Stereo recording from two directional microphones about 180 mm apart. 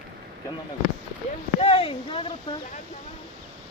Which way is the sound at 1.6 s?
30° left (ahead or behind).